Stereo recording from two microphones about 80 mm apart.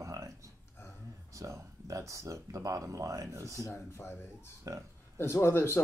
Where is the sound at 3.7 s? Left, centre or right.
Left.